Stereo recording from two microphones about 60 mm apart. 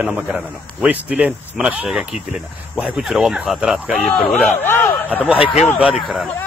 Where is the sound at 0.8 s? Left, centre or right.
Right.